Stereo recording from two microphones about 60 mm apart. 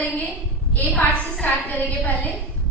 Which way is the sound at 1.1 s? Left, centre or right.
Left.